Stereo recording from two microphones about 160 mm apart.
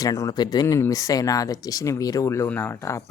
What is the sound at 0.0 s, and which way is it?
Speech, 20° left (ahead or behind).